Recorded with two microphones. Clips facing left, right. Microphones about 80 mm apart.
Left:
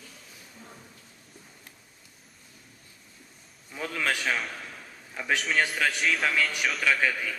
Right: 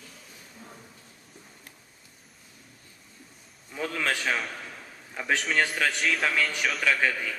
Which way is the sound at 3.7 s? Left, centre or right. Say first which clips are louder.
Right 1 dB; centre.